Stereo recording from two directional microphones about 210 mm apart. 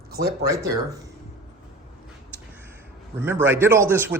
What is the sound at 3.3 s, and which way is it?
Speech, 10° right (ahead or behind).